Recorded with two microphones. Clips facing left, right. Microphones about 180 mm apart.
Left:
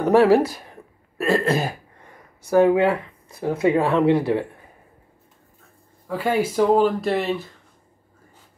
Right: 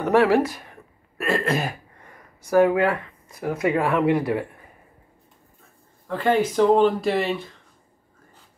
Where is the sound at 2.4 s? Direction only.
25° left (ahead or behind).